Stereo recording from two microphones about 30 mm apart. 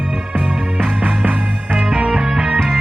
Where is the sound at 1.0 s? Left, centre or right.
Right.